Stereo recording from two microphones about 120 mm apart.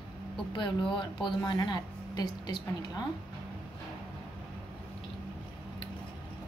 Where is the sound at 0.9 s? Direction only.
40° left (ahead or behind).